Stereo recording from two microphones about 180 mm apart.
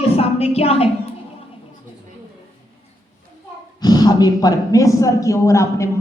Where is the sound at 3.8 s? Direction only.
20° left (ahead or behind).